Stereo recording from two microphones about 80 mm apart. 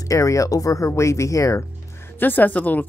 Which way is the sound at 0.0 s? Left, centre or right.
Left.